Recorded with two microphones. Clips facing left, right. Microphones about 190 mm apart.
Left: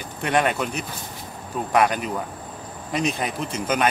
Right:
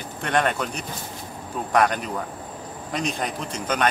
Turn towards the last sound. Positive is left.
turn(degrees=5)  # may be behind; listen again after turning